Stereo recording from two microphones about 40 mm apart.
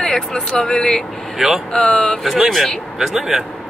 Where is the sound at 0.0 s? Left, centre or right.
Centre.